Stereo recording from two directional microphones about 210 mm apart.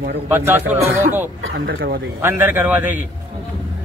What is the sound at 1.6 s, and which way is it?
Speech, 50° right (ahead or behind).